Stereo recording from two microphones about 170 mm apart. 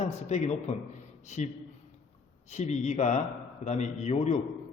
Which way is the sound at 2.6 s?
45° left (ahead or behind).